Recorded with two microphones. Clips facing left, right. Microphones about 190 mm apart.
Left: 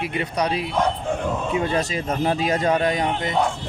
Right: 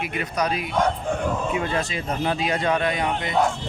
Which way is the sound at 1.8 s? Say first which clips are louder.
Left 3 dB; 40° left (ahead or behind).